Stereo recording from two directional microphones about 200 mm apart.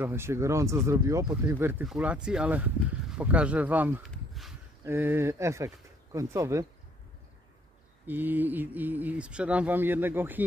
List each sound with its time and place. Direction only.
0.0 s speech: 10° right (ahead or behind)
4.1 s a sound: centre (ahead or behind)
4.8 s speech: 10° right (ahead or behind)
8.1 s speech: 10° right (ahead or behind)